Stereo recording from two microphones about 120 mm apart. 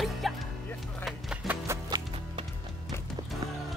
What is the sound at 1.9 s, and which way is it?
Music, 35° right (ahead or behind).